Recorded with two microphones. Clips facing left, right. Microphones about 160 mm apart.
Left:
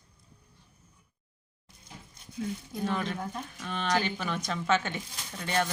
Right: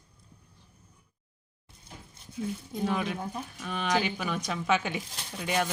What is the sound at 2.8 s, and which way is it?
Speech, 5° right (ahead or behind).